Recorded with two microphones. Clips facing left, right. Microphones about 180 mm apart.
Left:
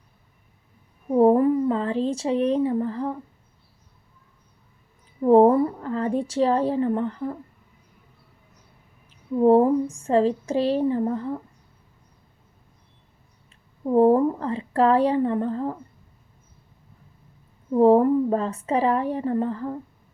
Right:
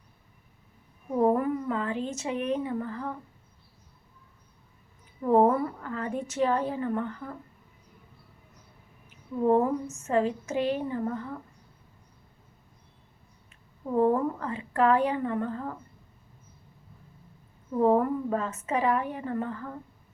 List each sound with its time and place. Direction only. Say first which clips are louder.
1.1 s speech: left 7 dB; 30° left (ahead or behind)
5.2 s a woman's voice: left 7 dB; 30° left (ahead or behind)
9.0 s a woman's voice: left 7 dB; 30° left (ahead or behind)
13.8 s a woman's voice: left 7 dB; 30° left (ahead or behind)
17.7 s a woman's voice: left 7 dB; 30° left (ahead or behind)